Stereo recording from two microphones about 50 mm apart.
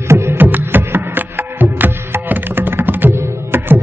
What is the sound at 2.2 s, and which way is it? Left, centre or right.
Tabla, right.